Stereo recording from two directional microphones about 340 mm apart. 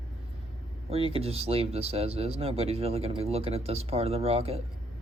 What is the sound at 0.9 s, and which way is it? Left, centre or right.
Speech, centre.